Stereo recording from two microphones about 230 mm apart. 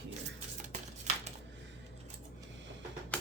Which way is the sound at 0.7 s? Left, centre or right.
Right.